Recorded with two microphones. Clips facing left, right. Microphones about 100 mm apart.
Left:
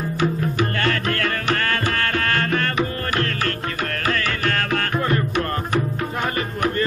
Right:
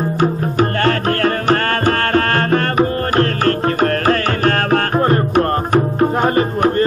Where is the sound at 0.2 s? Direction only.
40° right (ahead or behind).